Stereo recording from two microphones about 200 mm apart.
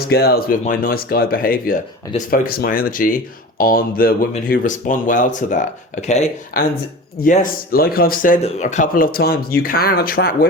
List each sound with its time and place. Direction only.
0.0 s speech: 50° left (ahead or behind); by 6.3 s 35° left (ahead or behind)
6.5 s speech: 45° left (ahead or behind)